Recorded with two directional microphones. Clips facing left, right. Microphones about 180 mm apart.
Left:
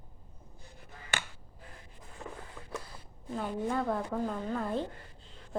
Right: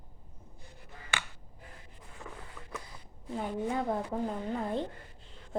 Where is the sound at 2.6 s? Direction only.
15° left (ahead or behind).